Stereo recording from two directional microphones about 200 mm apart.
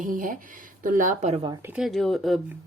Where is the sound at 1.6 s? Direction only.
5° right (ahead or behind).